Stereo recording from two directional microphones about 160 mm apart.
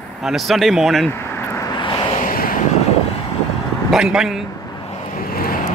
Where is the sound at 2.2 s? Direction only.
60° left (ahead or behind).